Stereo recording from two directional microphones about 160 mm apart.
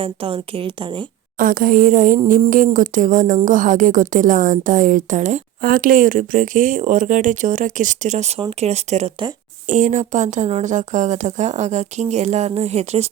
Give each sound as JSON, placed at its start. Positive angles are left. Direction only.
{"t": 0.0, "sound": "a woman's voice", "side_deg": -35}
{"t": 1.4, "sound": "a woman's voice", "side_deg": -60}